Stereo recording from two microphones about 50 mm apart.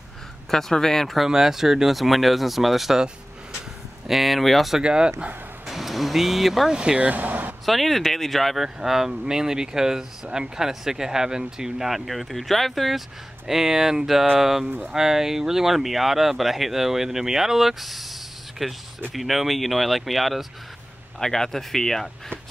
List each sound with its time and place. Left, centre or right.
0.5 s speech: centre
1.3 s speech: centre
4.1 s speech: centre
4.8 s speech: centre
5.7 s speech: centre
6.7 s speech: centre; by 7.5 s right
7.6 s speech: centre
8.6 s speech: centre